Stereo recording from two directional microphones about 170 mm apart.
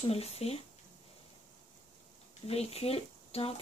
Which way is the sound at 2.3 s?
40° left (ahead or behind).